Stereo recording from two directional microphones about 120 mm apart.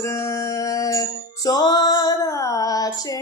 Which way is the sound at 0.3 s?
30° left (ahead or behind).